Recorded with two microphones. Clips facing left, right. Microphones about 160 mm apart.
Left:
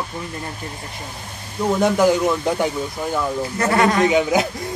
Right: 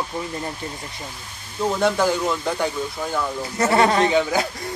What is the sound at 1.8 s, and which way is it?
Speech, 15° left (ahead or behind).